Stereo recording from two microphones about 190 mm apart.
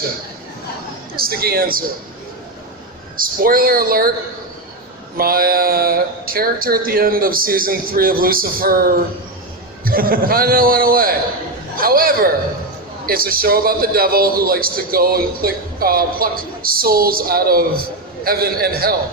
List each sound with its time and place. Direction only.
1.1 s a man's voice: 50° right (ahead or behind)
3.2 s a man's voice: 50° right (ahead or behind)
5.1 s a man's voice: 50° right (ahead or behind)